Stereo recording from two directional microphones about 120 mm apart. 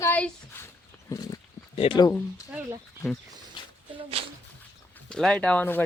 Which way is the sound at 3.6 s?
40° left (ahead or behind).